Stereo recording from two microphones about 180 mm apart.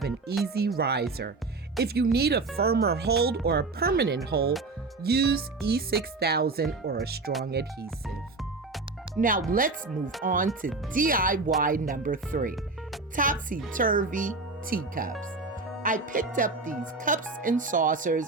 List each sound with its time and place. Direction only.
0.4 s speech: 60° right (ahead or behind)
9.2 s speech: 45° right (ahead or behind)